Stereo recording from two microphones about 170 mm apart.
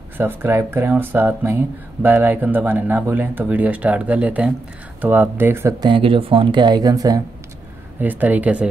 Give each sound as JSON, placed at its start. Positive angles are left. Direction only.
{"t": 0.2, "sound": "speech", "side_deg": -10}
{"t": 8.0, "sound": "speech", "side_deg": -10}